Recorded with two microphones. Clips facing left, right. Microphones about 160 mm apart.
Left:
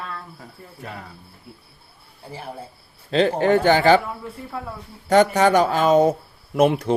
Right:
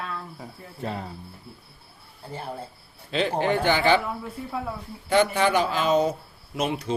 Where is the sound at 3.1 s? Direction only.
45° left (ahead or behind).